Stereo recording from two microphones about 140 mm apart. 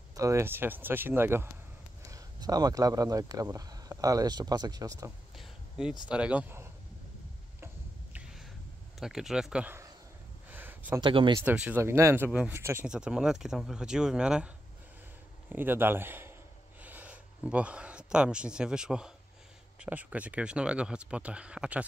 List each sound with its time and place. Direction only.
0.1 s speech: 20° right (ahead or behind)
5.4 s a sound: 5° right (ahead or behind)
6.0 s speech: 10° right (ahead or behind)
7.6 s a sound: 10° right (ahead or behind)
9.0 s speech: 5° right (ahead or behind)
10.5 s a sound: 15° right (ahead or behind)
11.0 s speech: 35° right (ahead or behind)
11.3 s speech: 10° right (ahead or behind)
12.8 s speech: 5° right (ahead or behind)
15.5 s speech: 15° right (ahead or behind)